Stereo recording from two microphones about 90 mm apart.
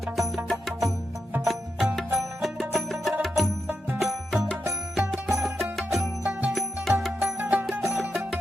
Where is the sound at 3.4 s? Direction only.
20° right (ahead or behind).